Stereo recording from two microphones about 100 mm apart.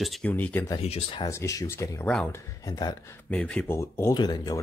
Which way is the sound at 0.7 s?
90° left.